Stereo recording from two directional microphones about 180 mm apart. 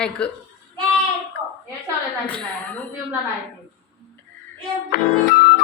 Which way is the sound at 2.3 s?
5° left (ahead or behind).